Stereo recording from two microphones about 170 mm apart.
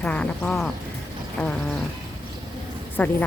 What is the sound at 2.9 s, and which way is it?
Speech, 10° left (ahead or behind).